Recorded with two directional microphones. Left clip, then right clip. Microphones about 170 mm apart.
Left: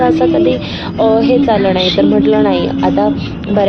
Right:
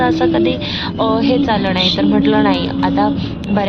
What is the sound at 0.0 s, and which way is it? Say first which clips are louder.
Speech: left 3 dB; 10° left (ahead or behind).